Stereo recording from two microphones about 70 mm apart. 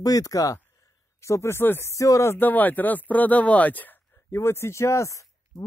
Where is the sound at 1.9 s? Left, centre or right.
Left.